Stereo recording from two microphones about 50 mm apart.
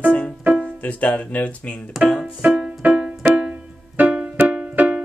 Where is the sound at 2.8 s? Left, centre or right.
Right.